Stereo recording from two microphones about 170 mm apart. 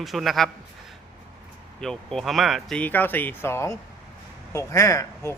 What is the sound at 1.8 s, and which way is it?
A man's voice, 5° left (ahead or behind).